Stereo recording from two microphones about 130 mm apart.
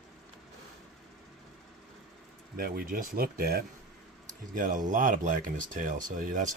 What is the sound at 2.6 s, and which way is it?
Speech, 90° right.